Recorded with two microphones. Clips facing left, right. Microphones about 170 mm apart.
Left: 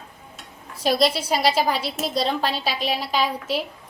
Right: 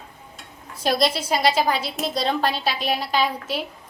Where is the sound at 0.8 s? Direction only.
5° left (ahead or behind).